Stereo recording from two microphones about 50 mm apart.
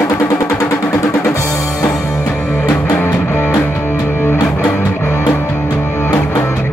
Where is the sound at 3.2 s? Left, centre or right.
Left.